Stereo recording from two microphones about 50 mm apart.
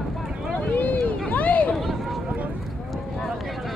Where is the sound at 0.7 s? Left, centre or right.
Left.